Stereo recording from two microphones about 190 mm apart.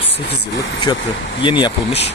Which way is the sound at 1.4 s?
25° left (ahead or behind).